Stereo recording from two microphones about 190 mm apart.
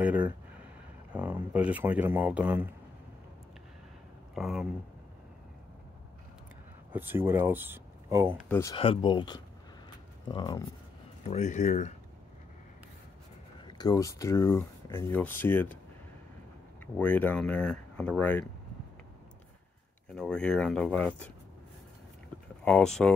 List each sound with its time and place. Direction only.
0.0 s a sound: 10° right (ahead or behind)
1.1 s speech: 10° right (ahead or behind)
4.4 s speech: centre (ahead or behind)
6.9 s speech: 10° right (ahead or behind)
8.5 s speech: 15° left (ahead or behind)
8.7 s speech: 30° left (ahead or behind)
11.2 s speech: 35° left (ahead or behind)
13.7 s speech: 20° left (ahead or behind)
16.8 s speech: 5° left (ahead or behind)
20.2 s speech: 5° left (ahead or behind)
22.7 s speech: 5° left (ahead or behind)